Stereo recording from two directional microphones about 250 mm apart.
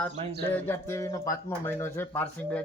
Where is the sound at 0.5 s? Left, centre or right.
Centre.